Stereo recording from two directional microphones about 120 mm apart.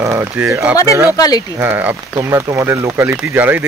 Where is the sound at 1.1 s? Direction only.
30° left (ahead or behind).